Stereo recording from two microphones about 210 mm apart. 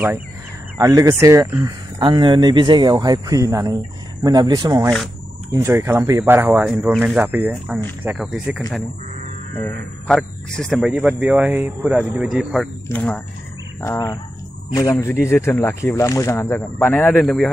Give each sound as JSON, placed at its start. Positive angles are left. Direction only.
{"t": 0.7, "sound": "speech", "side_deg": -15}
{"t": 12.8, "sound": "speech", "side_deg": 10}